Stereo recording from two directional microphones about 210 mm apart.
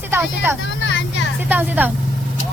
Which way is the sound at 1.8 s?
10° right (ahead or behind).